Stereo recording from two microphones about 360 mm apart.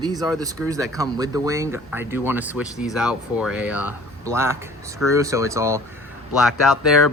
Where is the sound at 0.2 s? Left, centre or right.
Centre.